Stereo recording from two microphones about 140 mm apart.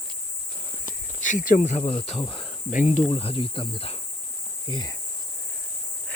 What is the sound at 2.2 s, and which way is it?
Speech, 35° left (ahead or behind).